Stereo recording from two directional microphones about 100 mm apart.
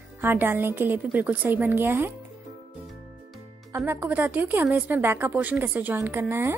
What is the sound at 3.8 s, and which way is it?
A woman's voice, 20° right (ahead or behind).